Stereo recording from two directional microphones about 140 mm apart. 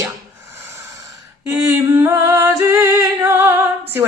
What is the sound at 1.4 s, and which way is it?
Speech, 20° right (ahead or behind).